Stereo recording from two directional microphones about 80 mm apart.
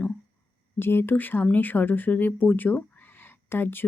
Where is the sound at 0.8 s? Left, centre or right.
Left.